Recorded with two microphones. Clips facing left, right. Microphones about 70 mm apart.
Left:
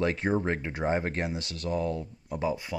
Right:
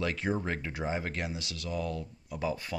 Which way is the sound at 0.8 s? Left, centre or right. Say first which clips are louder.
Left 6 dB; left.